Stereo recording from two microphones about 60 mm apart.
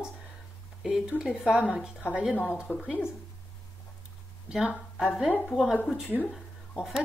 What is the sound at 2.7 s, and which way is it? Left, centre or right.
Speech, left.